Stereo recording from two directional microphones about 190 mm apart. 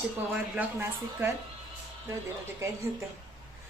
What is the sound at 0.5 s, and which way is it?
Speech, 10° right (ahead or behind).